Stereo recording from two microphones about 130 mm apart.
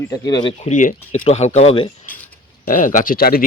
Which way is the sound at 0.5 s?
70° left (ahead or behind).